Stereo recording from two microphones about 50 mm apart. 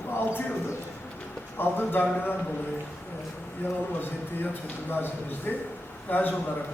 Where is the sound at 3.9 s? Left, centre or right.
Left.